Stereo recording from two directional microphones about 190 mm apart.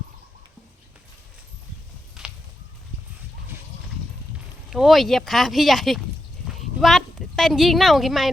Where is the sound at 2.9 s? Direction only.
35° left (ahead or behind).